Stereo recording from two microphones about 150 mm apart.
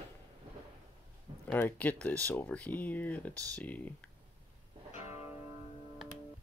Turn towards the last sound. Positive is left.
turn(degrees=45)  # may be behind; listen again after turning